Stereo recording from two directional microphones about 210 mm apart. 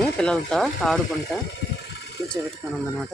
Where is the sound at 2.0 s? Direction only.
50° left (ahead or behind).